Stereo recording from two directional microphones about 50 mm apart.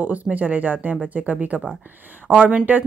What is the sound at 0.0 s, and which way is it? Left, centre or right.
A woman's voice, right.